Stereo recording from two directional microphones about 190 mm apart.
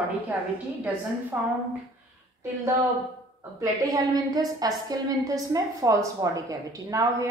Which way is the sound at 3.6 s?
20° right (ahead or behind).